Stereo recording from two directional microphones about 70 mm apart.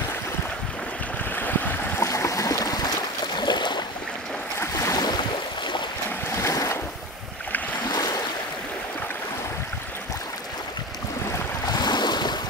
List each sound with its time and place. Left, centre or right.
1.3 s stream: left
2.0 s a sound: left
3.3 s boat: left
4.6 s boat: left
4.9 s boat: left
6.3 s boat: left
7.9 s waves: left
11.7 s waves: left